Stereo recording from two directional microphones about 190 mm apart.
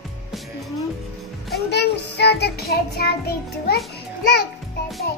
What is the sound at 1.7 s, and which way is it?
Music, 60° left (ahead or behind).